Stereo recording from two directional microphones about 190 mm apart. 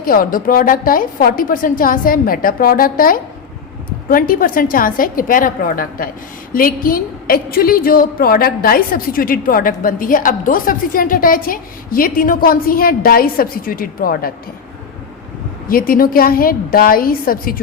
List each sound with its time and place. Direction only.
0.0 s a woman's voice: 50° left (ahead or behind)
15.7 s a woman's voice: 50° left (ahead or behind)